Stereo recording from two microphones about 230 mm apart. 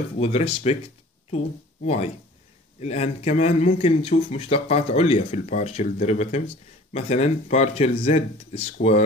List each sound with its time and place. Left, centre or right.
0.2 s a man's voice: left
1.9 s a man's voice: left